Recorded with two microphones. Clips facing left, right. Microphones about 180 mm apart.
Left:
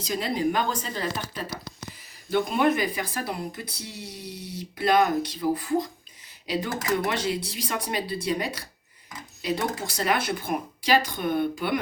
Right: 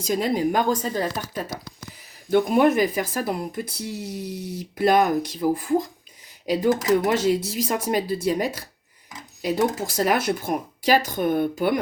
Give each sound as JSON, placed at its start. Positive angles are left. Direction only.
{"t": 0.0, "sound": "speech", "side_deg": -45}
{"t": 2.3, "sound": "speech", "side_deg": -45}